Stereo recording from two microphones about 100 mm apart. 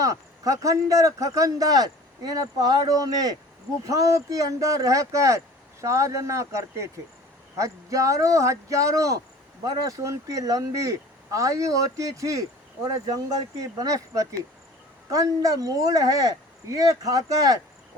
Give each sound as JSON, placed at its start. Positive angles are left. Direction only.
{"t": 0.0, "sound": "speech", "side_deg": -35}